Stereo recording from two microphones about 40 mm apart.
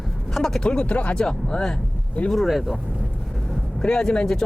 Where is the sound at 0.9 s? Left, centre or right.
Left.